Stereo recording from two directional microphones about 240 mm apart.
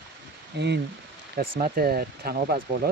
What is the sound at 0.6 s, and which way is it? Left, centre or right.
Speech, right.